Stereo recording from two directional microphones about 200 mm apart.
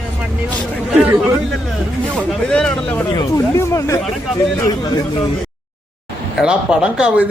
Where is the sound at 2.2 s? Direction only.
5° left (ahead or behind).